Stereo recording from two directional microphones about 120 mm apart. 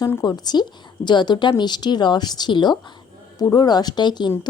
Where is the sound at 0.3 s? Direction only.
35° left (ahead or behind).